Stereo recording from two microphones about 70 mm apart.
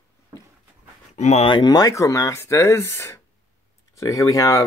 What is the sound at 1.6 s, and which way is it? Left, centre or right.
Speech, left.